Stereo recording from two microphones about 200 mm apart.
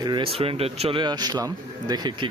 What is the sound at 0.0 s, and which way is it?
Speech, 25° right (ahead or behind).